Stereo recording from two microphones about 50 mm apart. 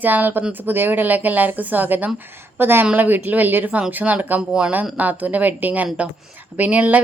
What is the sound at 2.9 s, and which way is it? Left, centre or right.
Speech, right.